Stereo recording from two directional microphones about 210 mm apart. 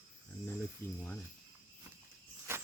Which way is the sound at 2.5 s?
10° right (ahead or behind).